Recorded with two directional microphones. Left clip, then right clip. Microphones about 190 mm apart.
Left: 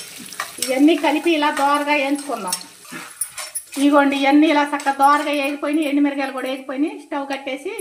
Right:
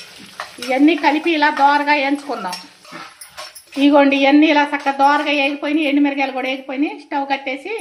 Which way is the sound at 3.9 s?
20° right (ahead or behind).